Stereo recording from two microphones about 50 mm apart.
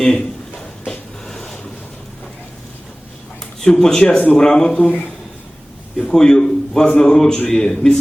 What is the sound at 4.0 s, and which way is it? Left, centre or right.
Speech, left.